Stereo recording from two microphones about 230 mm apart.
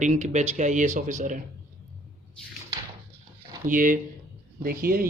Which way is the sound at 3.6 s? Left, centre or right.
Right.